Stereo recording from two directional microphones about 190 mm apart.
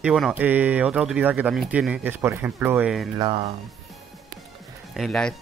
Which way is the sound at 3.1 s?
25° right (ahead or behind).